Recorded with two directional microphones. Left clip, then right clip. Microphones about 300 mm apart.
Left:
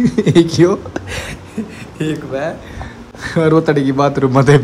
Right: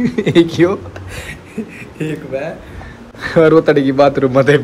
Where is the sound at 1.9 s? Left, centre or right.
Centre.